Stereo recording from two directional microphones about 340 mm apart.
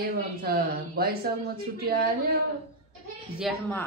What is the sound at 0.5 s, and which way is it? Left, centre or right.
Speech, right.